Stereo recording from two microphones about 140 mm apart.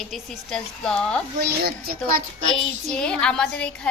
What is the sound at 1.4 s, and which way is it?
Speech, 90° right.